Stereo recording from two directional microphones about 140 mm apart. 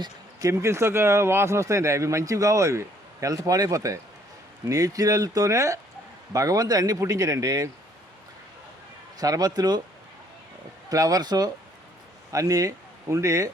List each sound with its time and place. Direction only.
0.0 s speech: 20° right (ahead or behind)
9.1 s speech: 25° right (ahead or behind)
10.8 s speech: 25° right (ahead or behind)